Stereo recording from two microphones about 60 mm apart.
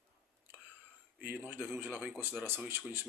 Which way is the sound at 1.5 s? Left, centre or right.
Right.